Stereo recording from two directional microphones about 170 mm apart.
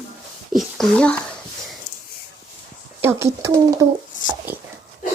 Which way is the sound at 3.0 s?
15° right (ahead or behind).